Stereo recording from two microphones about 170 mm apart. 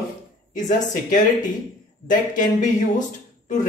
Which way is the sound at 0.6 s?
50° left (ahead or behind).